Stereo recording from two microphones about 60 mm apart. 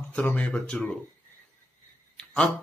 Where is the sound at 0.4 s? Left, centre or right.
Centre.